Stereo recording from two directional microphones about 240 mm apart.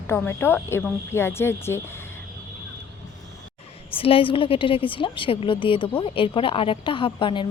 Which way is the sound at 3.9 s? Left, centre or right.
Left.